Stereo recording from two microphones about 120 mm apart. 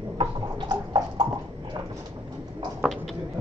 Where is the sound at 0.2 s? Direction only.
40° right (ahead or behind).